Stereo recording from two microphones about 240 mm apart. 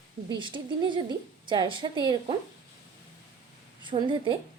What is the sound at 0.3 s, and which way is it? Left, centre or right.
A woman's voice, centre.